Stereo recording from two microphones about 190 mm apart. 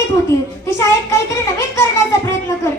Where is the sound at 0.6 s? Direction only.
15° left (ahead or behind).